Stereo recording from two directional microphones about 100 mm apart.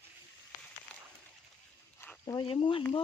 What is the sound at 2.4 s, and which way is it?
Speech, 65° left (ahead or behind).